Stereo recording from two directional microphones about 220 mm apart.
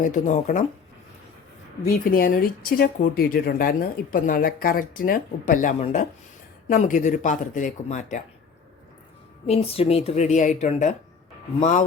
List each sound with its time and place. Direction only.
0.0 s speech: 35° left (ahead or behind)
1.8 s speech: 40° left (ahead or behind)
9.5 s speech: 25° left (ahead or behind)